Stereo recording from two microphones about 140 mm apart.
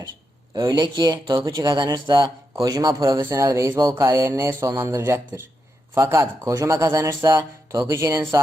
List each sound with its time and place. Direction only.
0.5 s speech: 30° right (ahead or behind)